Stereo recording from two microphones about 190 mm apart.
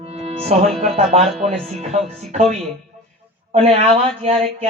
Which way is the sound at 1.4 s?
35° right (ahead or behind).